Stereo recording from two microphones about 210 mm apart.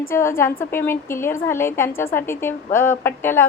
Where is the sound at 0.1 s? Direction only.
10° left (ahead or behind).